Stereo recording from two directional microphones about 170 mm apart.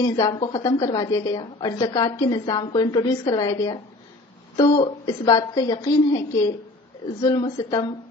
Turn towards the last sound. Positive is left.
turn(degrees=25)  # may be behind; listen again after turning